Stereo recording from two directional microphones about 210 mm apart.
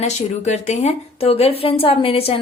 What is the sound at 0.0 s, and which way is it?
A woman's voice, 30° left (ahead or behind).